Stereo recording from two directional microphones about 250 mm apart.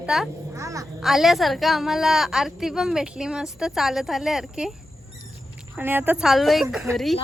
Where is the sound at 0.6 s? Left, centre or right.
Centre.